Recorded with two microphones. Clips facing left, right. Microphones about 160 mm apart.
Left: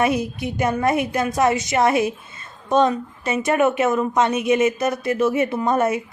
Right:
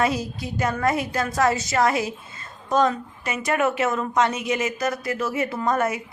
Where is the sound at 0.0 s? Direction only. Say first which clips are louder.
Left 3 dB; 20° left (ahead or behind).